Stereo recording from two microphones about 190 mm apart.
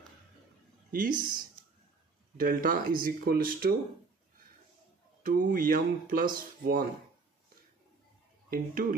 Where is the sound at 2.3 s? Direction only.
50° right (ahead or behind).